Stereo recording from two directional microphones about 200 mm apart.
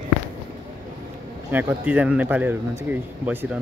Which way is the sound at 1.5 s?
10° right (ahead or behind).